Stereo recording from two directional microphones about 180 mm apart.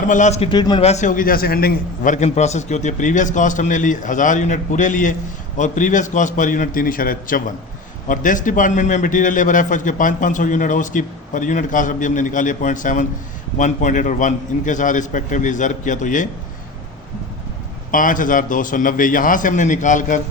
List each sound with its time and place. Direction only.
0.1 s a man's voice: 40° left (ahead or behind)
0.5 s a man's voice: 25° left (ahead or behind)
0.9 s a man's voice: 40° left (ahead or behind)
17.9 s a man's voice: 50° left (ahead or behind)